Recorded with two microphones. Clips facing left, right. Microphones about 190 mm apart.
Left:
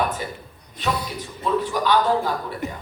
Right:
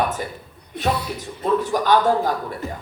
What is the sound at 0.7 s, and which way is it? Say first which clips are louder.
Speech: right 4 dB; 60° right (ahead or behind).